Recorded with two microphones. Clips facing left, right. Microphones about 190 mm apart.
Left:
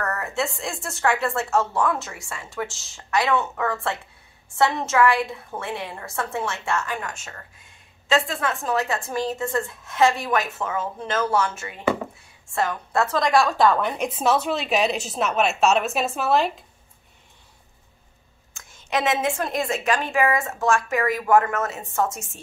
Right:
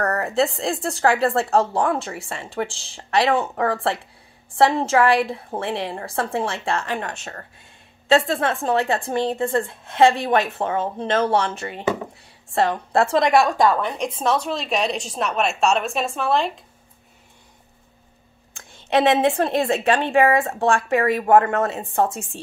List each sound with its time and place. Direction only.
0.0 s a woman's voice: 35° right (ahead or behind); by 13.7 s 15° right (ahead or behind)
13.7 s a woman's voice: 5° left (ahead or behind)
18.5 s a woman's voice: 30° right (ahead or behind)